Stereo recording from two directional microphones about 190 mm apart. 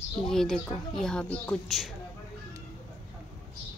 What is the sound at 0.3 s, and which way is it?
A woman's voice, centre (ahead or behind).